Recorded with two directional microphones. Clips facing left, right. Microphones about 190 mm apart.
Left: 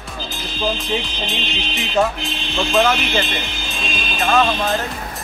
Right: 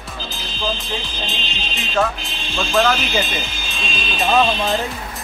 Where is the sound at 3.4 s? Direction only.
55° left (ahead or behind).